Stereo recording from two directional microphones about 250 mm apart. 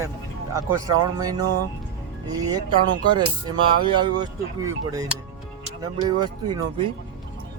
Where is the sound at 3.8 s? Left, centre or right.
Centre.